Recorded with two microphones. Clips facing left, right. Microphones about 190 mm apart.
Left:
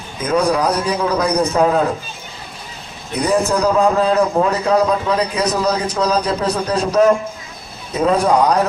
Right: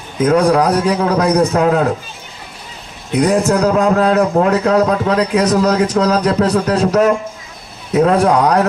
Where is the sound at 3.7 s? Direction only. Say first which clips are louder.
Right 2 dB; 75° right (ahead or behind).